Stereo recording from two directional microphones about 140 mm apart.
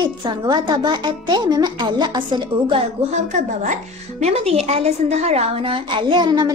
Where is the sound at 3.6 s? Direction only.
60° right (ahead or behind).